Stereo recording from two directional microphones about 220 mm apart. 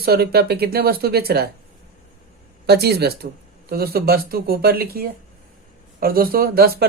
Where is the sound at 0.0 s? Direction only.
45° right (ahead or behind).